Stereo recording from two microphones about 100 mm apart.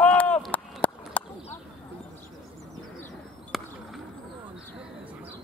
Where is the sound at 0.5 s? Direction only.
15° left (ahead or behind).